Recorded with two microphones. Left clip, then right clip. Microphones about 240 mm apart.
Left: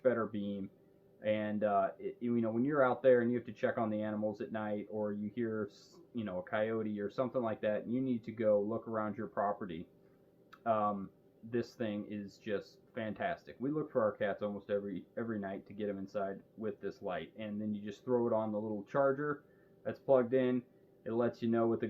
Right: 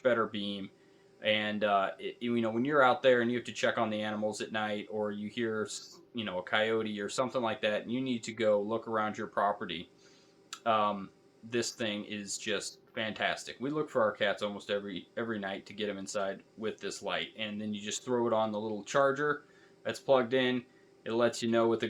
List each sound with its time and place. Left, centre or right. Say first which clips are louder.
0.0 s speech: right 4 dB; centre